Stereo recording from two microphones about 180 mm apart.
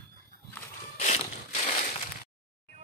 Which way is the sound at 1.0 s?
40° left (ahead or behind).